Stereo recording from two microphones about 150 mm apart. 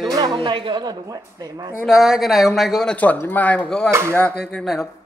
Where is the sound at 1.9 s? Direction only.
Centre (ahead or behind).